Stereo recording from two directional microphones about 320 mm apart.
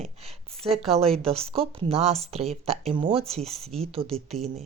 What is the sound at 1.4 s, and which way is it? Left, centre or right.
Speech, centre.